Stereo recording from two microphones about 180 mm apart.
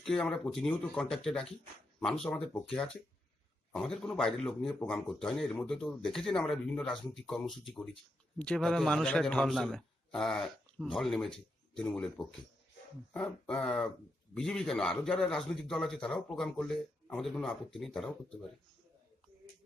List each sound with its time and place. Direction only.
0.0 s a man's voice: 5° left (ahead or behind)